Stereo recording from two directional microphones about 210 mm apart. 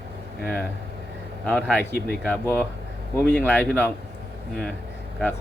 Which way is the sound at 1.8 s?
50° left (ahead or behind).